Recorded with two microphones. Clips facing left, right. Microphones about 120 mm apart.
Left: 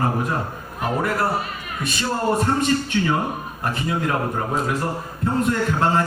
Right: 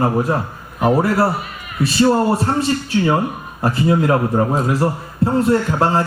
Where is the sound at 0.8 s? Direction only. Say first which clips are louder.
Right 7 dB; 35° right (ahead or behind).